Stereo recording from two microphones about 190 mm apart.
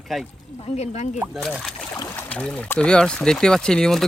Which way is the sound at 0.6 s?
35° left (ahead or behind).